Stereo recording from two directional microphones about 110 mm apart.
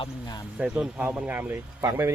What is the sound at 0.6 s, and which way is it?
Speech, 5° right (ahead or behind).